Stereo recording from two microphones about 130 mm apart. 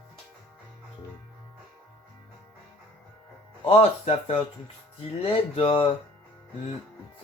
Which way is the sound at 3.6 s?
50° left (ahead or behind).